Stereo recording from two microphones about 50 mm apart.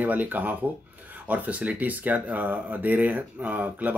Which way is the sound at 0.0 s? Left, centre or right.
Right.